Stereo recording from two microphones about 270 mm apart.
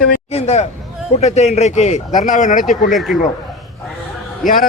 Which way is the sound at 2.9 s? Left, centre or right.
Centre.